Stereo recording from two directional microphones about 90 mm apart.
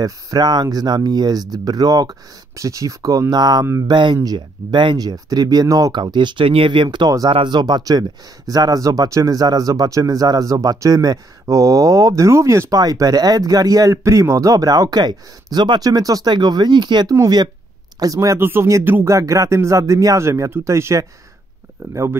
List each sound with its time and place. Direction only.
0.0 s speech: 45° right (ahead or behind)
17.1 s speech: 45° right (ahead or behind)
18.4 s speech: 25° right (ahead or behind)